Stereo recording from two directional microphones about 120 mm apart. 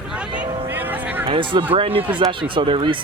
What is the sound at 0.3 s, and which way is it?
Music, 15° right (ahead or behind).